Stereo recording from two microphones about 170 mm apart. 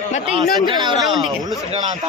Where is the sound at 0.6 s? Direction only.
25° right (ahead or behind).